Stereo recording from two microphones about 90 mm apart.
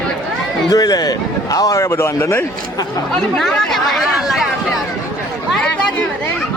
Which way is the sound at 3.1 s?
5° left (ahead or behind).